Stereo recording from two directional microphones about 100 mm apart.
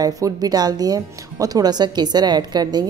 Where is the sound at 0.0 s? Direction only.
40° right (ahead or behind).